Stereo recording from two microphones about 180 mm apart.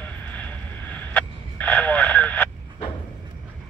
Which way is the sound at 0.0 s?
10° left (ahead or behind).